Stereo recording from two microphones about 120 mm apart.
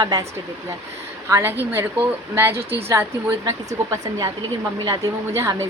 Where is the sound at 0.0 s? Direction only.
30° right (ahead or behind).